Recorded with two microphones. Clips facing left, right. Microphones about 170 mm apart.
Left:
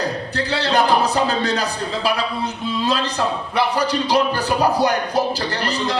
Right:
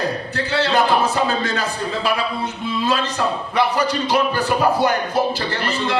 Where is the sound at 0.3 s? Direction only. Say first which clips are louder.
Even; 35° left (ahead or behind).